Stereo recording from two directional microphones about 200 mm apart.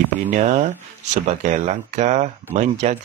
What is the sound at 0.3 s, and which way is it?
Speech, 35° right (ahead or behind).